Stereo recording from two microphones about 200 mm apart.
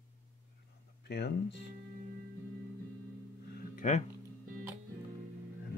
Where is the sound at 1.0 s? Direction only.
55° left (ahead or behind).